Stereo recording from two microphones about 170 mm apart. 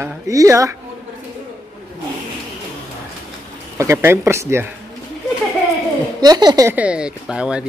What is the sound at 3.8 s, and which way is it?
Speech, 15° right (ahead or behind).